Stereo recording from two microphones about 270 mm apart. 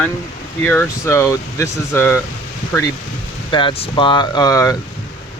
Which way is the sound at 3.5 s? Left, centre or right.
Centre.